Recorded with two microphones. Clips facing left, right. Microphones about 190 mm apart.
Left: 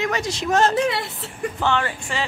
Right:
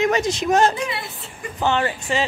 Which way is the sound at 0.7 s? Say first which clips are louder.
Left 6 dB; 75° left (ahead or behind).